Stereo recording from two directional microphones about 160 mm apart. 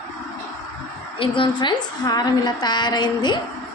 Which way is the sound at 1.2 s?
30° left (ahead or behind).